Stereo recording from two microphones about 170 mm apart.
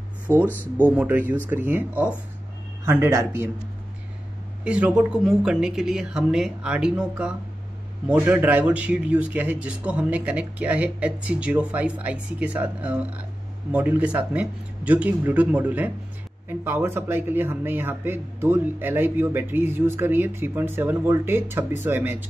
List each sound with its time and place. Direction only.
0.3 s a man's voice: 15° right (ahead or behind)
4.6 s a man's voice: 5° right (ahead or behind)